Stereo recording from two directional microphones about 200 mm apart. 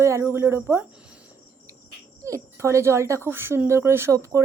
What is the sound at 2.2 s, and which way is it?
A woman's voice, 15° right (ahead or behind).